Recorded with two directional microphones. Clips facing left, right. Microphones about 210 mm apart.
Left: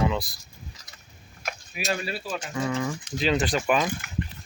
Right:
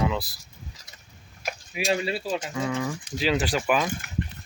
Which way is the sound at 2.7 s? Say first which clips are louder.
Even; 5° right (ahead or behind).